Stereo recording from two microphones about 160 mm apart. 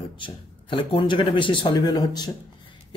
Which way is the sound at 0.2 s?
30° left (ahead or behind).